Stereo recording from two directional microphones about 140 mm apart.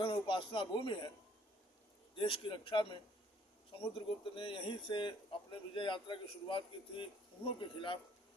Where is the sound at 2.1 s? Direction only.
40° left (ahead or behind).